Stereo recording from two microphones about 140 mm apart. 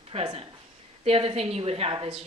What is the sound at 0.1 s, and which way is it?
A woman's voice, 45° right (ahead or behind).